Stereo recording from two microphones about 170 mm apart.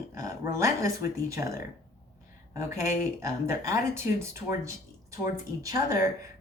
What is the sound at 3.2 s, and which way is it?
Speech, 20° right (ahead or behind).